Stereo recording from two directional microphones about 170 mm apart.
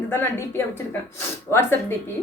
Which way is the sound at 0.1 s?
15° left (ahead or behind).